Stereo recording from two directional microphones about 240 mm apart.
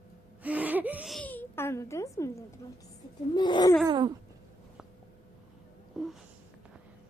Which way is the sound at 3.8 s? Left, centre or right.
Centre.